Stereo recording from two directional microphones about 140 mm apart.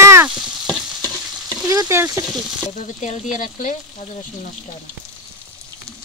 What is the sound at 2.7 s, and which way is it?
Frying, 60° left (ahead or behind).